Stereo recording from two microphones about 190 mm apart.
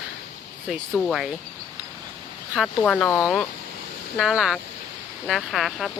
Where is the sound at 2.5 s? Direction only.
Centre (ahead or behind).